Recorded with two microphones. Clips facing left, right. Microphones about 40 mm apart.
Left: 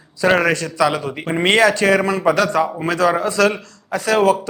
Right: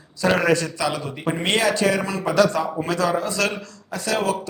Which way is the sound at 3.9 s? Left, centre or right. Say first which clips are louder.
Left 7 dB; centre.